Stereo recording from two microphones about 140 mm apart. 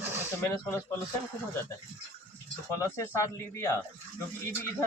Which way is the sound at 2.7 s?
20° left (ahead or behind).